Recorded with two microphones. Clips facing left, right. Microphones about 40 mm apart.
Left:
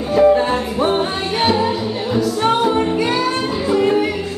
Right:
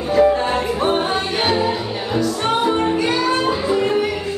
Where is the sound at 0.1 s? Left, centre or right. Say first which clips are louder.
Left 2 dB; centre.